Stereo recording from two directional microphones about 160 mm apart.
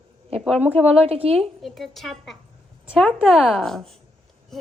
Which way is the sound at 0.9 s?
40° right (ahead or behind).